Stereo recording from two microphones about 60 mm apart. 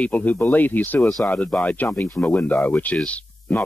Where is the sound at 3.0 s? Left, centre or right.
Left.